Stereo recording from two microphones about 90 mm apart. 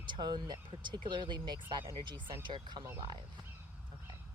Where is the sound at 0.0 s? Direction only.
55° right (ahead or behind).